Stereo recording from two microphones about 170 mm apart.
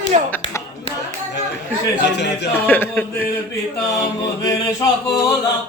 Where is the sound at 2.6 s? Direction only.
10° left (ahead or behind).